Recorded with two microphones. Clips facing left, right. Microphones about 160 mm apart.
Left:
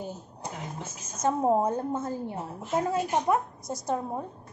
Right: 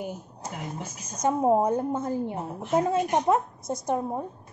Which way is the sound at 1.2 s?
15° right (ahead or behind).